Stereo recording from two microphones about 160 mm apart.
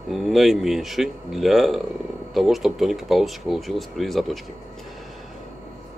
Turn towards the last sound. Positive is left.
turn(degrees=0)  # may be behind; listen again after turning